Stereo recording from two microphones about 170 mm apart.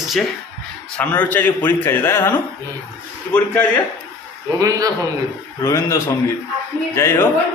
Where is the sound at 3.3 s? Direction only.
10° left (ahead or behind).